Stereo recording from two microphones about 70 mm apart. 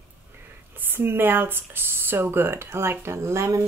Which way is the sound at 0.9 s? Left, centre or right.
Right.